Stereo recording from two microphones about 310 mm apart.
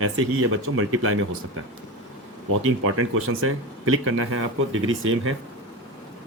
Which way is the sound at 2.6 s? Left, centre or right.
Right.